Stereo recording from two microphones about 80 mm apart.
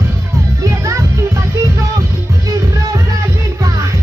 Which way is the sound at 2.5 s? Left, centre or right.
Right.